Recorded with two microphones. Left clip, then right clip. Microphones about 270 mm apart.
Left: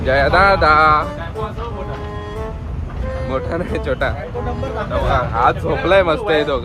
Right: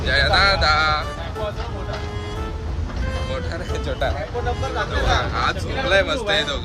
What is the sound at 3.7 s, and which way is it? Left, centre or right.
Speech, centre.